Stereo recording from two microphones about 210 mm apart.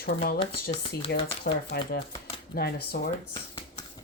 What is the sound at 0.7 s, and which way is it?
Speech, 25° left (ahead or behind).